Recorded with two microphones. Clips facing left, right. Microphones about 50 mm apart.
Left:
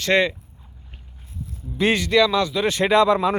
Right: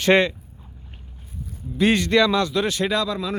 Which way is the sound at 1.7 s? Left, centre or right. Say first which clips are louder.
Right 1 dB; centre.